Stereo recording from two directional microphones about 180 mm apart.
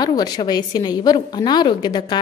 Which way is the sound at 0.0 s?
20° left (ahead or behind).